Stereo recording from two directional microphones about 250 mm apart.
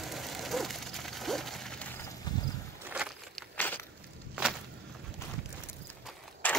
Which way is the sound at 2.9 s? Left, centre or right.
Centre.